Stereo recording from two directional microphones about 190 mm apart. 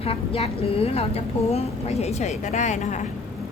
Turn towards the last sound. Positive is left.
turn(degrees=40)  # may be behind; listen again after turning